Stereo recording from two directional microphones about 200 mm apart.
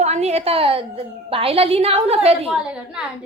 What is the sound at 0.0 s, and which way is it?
A woman's voice, 35° right (ahead or behind).